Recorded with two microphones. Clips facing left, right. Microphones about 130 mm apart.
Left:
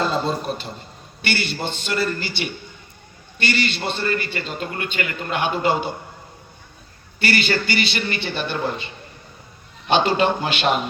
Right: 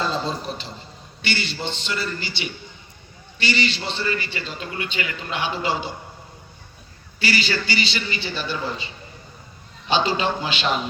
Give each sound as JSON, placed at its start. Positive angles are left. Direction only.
{"t": 0.0, "sound": "a man's voice", "side_deg": 55}
{"t": 7.2, "sound": "a man's voice", "side_deg": 55}